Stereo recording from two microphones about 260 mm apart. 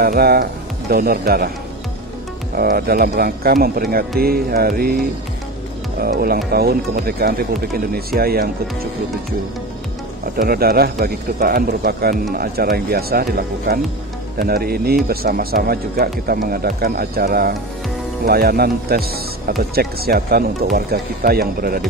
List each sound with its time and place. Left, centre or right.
0.0 s speech: right
2.5 s speech: right
5.9 s speech: right
10.3 s speech: right